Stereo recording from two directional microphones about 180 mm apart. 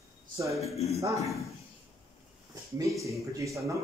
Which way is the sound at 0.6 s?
35° left (ahead or behind).